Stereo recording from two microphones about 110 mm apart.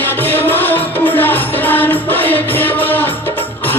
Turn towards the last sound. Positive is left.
turn(degrees=15)  # may be behind; listen again after turning